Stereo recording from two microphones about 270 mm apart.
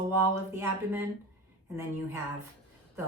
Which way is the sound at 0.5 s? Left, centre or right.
Centre.